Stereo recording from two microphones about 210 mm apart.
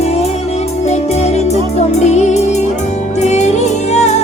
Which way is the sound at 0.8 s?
30° left (ahead or behind).